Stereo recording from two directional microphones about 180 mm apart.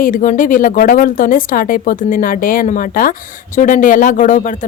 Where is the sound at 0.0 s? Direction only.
45° left (ahead or behind).